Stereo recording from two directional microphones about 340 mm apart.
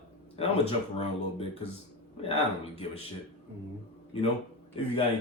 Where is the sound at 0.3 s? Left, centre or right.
Centre.